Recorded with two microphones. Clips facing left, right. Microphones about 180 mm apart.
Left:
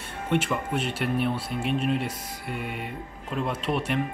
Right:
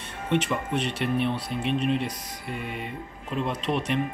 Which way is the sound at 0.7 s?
5° left (ahead or behind).